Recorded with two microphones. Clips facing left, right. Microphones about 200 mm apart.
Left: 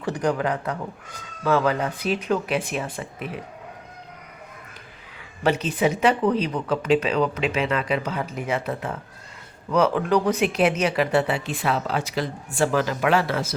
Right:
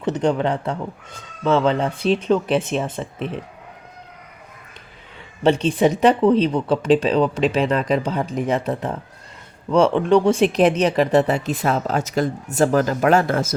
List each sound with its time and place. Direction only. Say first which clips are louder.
0.0 s speech: right 4 dB; 25° right (ahead or behind)
5.4 s speech: right 5 dB; 30° right (ahead or behind); by 13.6 s 45° right (ahead or behind)